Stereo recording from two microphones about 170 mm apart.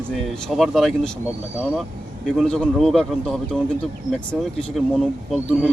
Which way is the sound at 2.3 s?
5° left (ahead or behind).